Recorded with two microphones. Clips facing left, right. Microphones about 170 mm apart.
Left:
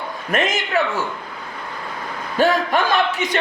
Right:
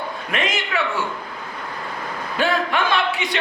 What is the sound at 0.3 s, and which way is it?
Speech, 45° left (ahead or behind).